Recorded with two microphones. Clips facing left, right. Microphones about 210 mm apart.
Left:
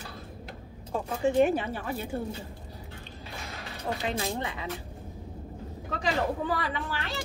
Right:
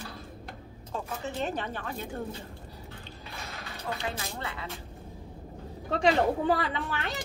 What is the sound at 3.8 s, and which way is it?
Speech, 30° left (ahead or behind).